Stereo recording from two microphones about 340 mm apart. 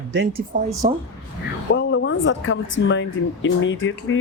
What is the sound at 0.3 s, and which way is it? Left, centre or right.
Speech, centre.